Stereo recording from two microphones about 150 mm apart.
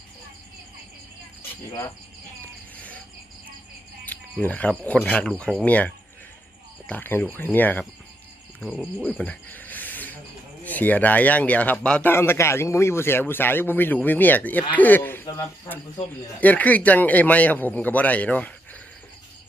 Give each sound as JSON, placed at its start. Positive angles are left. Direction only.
{"t": 1.4, "sound": "cricket", "side_deg": 20}
{"t": 2.7, "sound": "cricket", "side_deg": 10}
{"t": 4.0, "sound": "speech", "side_deg": 10}
{"t": 9.0, "sound": "cricket", "side_deg": 10}
{"t": 10.6, "sound": "speech", "side_deg": 10}